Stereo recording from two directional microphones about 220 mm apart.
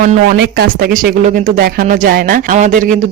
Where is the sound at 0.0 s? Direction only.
45° right (ahead or behind).